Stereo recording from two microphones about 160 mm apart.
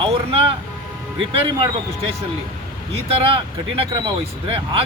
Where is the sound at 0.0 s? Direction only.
35° right (ahead or behind).